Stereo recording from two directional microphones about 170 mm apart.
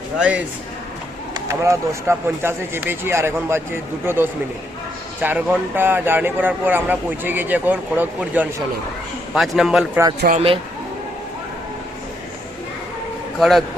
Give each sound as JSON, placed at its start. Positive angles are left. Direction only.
{"t": 0.2, "sound": "a man's voice", "side_deg": -10}
{"t": 10.3, "sound": "speech", "side_deg": -35}
{"t": 13.4, "sound": "a man's voice", "side_deg": 0}